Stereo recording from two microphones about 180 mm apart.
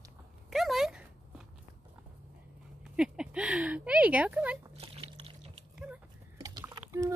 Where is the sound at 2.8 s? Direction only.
5° right (ahead or behind).